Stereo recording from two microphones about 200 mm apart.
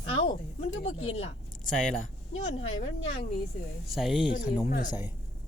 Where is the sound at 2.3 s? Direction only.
30° left (ahead or behind).